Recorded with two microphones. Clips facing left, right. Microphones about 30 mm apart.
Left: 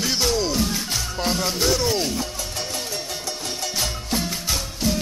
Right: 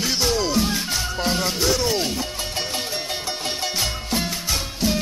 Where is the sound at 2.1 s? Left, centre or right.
Right.